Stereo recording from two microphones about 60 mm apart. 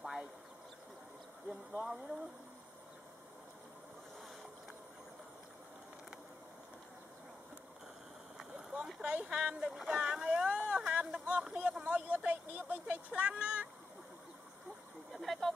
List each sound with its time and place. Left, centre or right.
1.5 s speech: centre
8.4 s a sound: centre
9.0 s speech: centre
9.9 s vehicle: centre
10.9 s a sound: centre
11.8 s vehicle: right
12.3 s speech: right
15.1 s speech: centre